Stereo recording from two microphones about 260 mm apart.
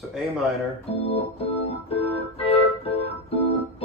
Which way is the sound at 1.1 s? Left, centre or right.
Left.